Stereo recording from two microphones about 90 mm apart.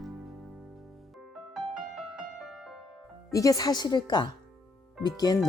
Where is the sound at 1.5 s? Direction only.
10° right (ahead or behind).